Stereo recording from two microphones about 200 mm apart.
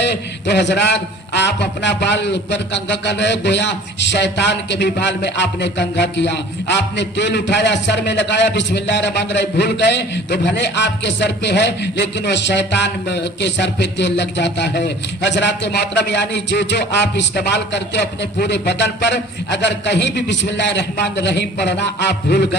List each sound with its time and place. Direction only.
0.0 s a man's voice: 60° left (ahead or behind)